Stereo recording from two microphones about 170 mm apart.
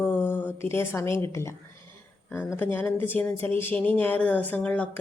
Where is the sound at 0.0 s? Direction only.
15° left (ahead or behind).